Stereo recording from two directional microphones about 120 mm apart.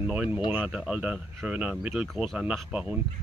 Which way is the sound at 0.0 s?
10° right (ahead or behind).